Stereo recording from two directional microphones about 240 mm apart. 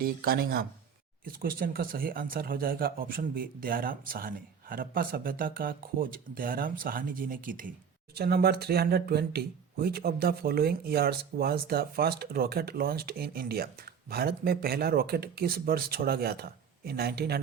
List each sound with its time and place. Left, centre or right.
0.0 s speech: right